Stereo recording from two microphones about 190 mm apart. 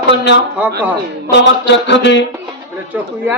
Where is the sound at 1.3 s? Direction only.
65° left (ahead or behind).